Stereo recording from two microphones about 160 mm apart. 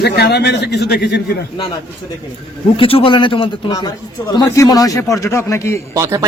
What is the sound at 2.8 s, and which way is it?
A man's voice, 35° left (ahead or behind).